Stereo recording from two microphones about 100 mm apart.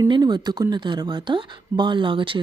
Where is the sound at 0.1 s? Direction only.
50° right (ahead or behind).